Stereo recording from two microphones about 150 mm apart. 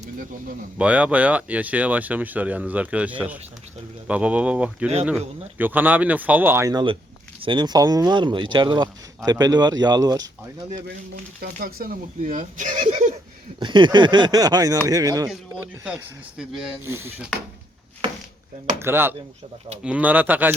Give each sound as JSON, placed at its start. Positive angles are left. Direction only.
{"t": 0.0, "sound": "speech", "side_deg": -65}
{"t": 0.8, "sound": "speech", "side_deg": -10}
{"t": 7.4, "sound": "speech", "side_deg": -30}
{"t": 11.3, "sound": "speech", "side_deg": -75}
{"t": 13.6, "sound": "speech", "side_deg": -30}
{"t": 15.6, "sound": "speech", "side_deg": -10}
{"t": 16.8, "sound": "speech", "side_deg": -15}
{"t": 17.2, "sound": "speech", "side_deg": 0}
{"t": 18.8, "sound": "speech", "side_deg": -15}